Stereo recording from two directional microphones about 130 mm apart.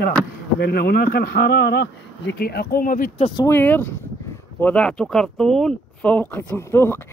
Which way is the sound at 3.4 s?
15° left (ahead or behind).